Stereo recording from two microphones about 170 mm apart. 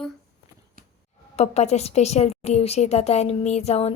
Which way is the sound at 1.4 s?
40° left (ahead or behind).